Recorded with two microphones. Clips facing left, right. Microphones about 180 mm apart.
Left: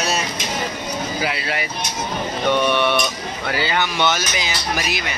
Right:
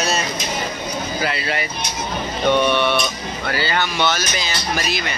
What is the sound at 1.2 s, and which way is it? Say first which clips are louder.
Speech: right 3 dB; 5° left (ahead or behind).